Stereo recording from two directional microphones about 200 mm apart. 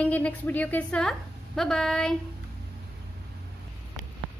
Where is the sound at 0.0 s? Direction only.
5° left (ahead or behind).